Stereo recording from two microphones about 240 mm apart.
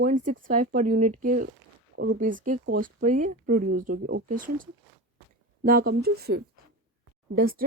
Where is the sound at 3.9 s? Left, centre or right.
Right.